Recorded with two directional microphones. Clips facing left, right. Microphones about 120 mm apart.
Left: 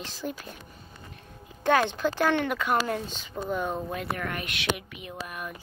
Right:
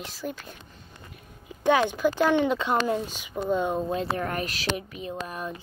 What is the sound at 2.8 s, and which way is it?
Speech, 15° right (ahead or behind).